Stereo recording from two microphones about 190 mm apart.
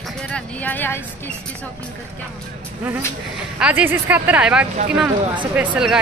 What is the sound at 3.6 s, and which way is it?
Speech, 10° right (ahead or behind).